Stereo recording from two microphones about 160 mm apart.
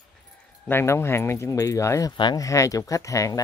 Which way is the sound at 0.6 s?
15° left (ahead or behind).